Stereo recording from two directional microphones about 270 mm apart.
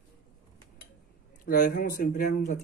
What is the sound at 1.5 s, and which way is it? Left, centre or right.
Speech, left.